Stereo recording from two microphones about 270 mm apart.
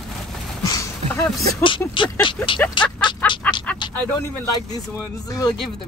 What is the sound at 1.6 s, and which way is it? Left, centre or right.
A woman's voice, centre.